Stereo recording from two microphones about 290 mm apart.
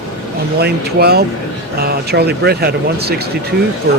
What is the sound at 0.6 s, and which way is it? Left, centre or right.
Speech, right.